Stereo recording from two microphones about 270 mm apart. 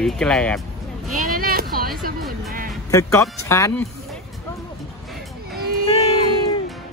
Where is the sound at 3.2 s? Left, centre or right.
Centre.